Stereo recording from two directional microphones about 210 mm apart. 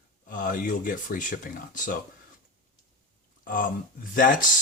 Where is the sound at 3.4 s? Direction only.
40° left (ahead or behind).